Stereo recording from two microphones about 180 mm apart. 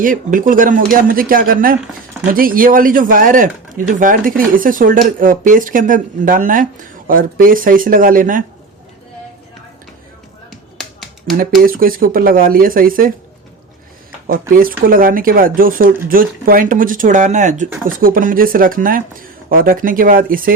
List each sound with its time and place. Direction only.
0.0 s speech: 50° right (ahead or behind)
10.5 s finger snapping: centre (ahead or behind)
11.6 s speech: 55° right (ahead or behind)
14.3 s speech: 50° right (ahead or behind)